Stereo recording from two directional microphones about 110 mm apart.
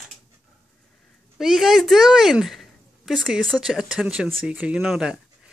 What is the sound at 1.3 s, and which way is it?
A woman's voice, 5° right (ahead or behind).